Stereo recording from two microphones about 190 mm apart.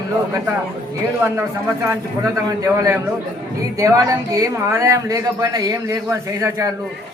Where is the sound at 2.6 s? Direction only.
15° right (ahead or behind).